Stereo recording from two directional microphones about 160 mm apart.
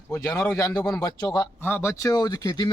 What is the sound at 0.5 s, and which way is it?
Speech, 20° left (ahead or behind).